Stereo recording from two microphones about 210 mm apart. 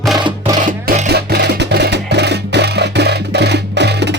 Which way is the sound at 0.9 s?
45° right (ahead or behind).